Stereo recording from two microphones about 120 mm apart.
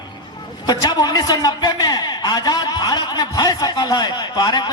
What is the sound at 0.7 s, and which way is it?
A man's voice, 35° left (ahead or behind).